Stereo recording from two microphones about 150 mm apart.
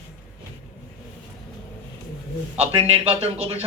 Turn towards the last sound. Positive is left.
turn(degrees=-40)  # may be behind; listen again after turning